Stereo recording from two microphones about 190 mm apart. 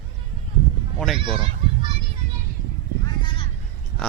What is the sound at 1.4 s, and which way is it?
Honk, 30° right (ahead or behind).